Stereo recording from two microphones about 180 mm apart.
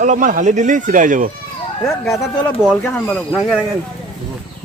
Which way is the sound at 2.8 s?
5° left (ahead or behind).